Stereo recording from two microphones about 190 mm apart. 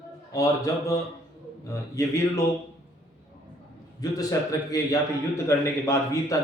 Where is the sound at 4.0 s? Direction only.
20° left (ahead or behind).